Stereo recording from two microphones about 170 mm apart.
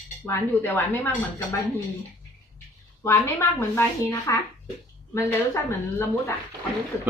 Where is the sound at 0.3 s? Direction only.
15° left (ahead or behind).